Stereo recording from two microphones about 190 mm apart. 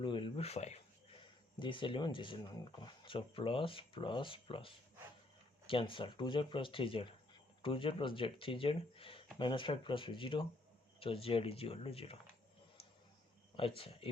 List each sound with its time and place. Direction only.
0.0 s speech: 25° left (ahead or behind)
1.5 s speech: 25° left (ahead or behind)
13.6 s speech: 30° left (ahead or behind)